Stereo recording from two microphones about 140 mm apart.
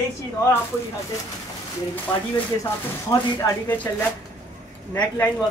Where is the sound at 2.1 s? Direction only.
35° left (ahead or behind).